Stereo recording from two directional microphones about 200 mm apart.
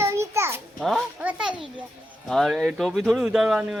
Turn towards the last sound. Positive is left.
turn(degrees=-5)  # may be behind; listen again after turning